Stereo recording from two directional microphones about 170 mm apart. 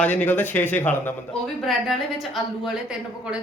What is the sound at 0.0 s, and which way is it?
A man's voice, 10° left (ahead or behind).